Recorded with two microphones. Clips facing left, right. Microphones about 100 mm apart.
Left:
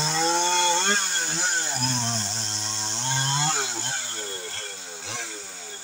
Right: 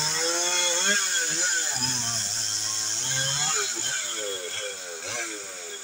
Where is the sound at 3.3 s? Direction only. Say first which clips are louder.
Left 5 dB; 40° left (ahead or behind).